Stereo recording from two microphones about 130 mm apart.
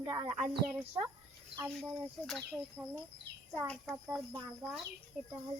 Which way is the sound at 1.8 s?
5° left (ahead or behind).